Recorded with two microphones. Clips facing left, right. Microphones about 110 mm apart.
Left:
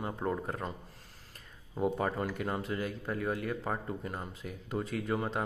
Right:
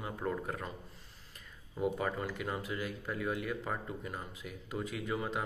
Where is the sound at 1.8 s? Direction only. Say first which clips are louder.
Left 3 dB; 40° left (ahead or behind).